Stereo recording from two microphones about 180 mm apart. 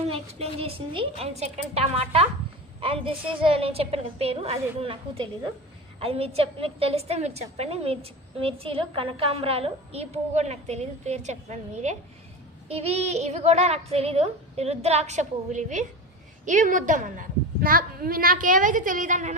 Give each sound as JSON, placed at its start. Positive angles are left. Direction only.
{"t": 0.1, "sound": "a woman's voice", "side_deg": -35}